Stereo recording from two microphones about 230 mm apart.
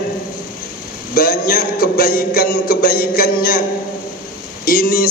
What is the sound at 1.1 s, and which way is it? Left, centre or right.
A man's voice, left.